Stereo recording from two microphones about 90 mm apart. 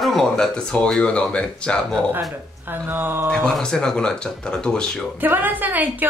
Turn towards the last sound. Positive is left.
turn(degrees=-20)  # may be behind; listen again after turning